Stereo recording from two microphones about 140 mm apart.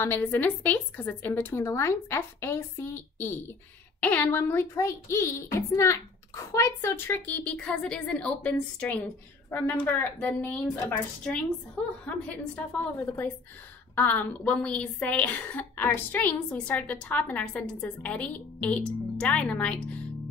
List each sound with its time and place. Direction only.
0.0 s a child's voice: 15° left (ahead or behind)